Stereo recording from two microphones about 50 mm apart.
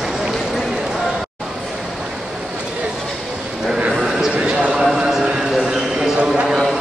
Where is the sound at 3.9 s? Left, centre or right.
Centre.